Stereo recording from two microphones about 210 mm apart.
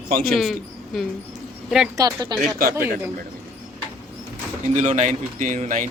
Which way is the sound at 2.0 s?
20° right (ahead or behind).